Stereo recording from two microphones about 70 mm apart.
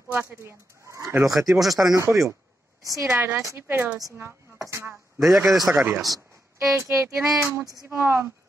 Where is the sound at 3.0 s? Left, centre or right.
Right.